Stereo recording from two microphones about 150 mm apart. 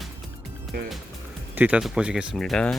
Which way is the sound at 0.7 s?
90° right.